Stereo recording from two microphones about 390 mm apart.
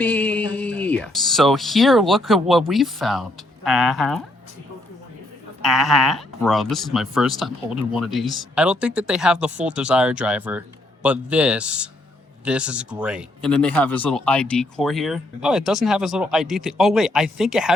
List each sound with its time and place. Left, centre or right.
0.0 s speech: centre
5.6 s speech: centre